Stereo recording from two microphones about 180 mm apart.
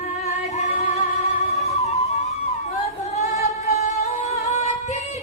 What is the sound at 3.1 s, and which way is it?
Music, 40° left (ahead or behind).